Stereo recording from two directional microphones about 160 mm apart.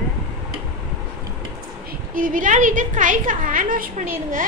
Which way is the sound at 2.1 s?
55° right (ahead or behind).